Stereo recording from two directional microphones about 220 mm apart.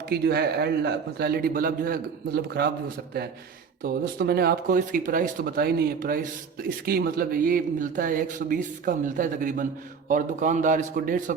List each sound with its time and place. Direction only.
0.1 s a man's voice: 45° right (ahead or behind)
3.8 s speech: 45° right (ahead or behind)